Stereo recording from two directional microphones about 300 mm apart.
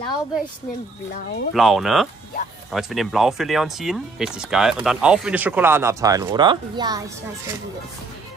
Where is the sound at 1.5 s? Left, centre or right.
Centre.